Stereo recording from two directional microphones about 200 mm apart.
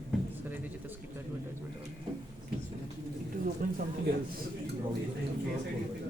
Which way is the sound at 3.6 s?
45° right (ahead or behind).